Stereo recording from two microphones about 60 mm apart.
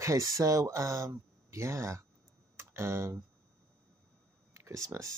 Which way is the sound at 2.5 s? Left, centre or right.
Right.